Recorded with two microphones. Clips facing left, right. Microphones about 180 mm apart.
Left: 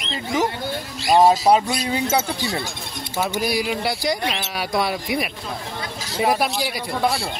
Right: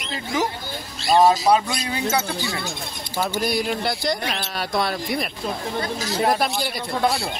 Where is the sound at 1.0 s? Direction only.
15° left (ahead or behind).